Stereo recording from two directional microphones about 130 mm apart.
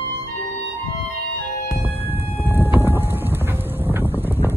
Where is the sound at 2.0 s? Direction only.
15° right (ahead or behind).